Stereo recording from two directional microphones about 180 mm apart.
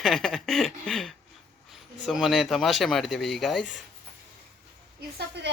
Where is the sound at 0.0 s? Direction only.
Centre (ahead or behind).